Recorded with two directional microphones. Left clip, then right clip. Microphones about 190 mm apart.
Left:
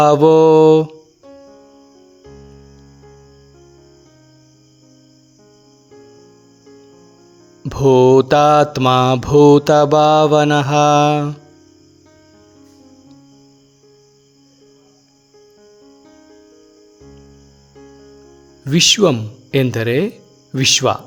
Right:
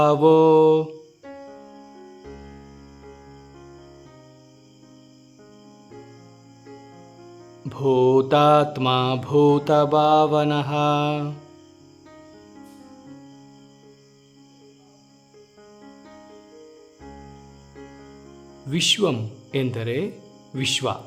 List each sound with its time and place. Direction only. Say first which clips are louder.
0.0 s mantra: left 6 dB; 30° left (ahead or behind)
1.2 s music: right 2 dB; centre (ahead or behind)
7.7 s mantra: left 8 dB; 30° left (ahead or behind)
18.6 s speech: left 8 dB; 30° left (ahead or behind)